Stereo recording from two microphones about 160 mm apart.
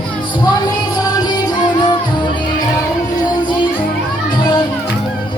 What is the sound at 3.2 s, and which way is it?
Music, 30° left (ahead or behind).